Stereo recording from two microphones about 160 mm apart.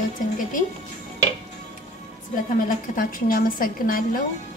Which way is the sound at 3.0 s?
65° left (ahead or behind).